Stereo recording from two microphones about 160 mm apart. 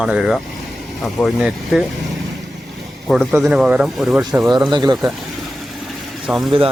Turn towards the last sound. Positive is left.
turn(degrees=0)  # may be behind; listen again after turning